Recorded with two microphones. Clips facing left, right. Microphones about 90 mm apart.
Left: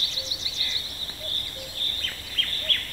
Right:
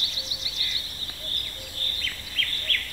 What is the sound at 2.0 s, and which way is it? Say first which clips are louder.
Bird: right 2 dB; 40° left (ahead or behind).